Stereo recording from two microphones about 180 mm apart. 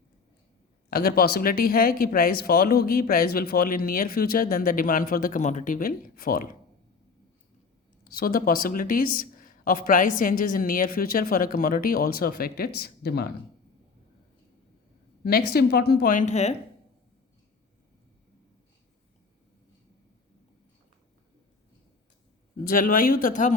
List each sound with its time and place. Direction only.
0.9 s speech: 55° left (ahead or behind)
8.0 s speech: 55° left (ahead or behind)
15.2 s speech: 55° left (ahead or behind); by 16.6 s 40° left (ahead or behind)
22.6 s speech: 50° left (ahead or behind)